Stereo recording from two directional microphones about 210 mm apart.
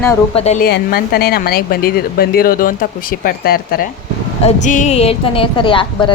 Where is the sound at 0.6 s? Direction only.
45° left (ahead or behind).